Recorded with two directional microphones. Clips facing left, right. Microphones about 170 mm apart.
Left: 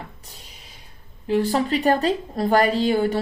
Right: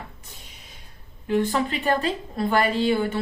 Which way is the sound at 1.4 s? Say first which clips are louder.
Left 3 dB; 35° left (ahead or behind).